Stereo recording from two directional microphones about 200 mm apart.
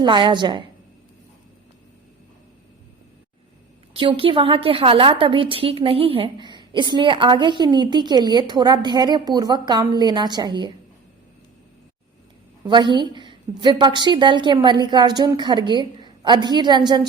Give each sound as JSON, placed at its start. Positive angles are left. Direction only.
{"t": 0.0, "sound": "a woman's voice", "side_deg": -25}
{"t": 3.9, "sound": "a woman's voice", "side_deg": -25}
{"t": 12.6, "sound": "a woman's voice", "side_deg": -25}